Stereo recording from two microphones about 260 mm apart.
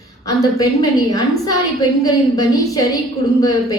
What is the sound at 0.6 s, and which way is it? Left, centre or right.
A woman's voice, centre.